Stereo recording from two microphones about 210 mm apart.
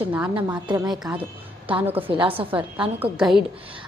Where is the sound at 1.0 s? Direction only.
5° right (ahead or behind).